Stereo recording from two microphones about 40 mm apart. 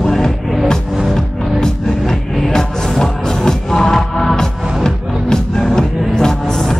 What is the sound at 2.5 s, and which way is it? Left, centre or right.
Music, centre.